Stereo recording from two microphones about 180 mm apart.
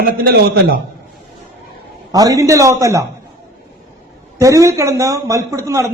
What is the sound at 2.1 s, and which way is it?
Speech, 20° right (ahead or behind).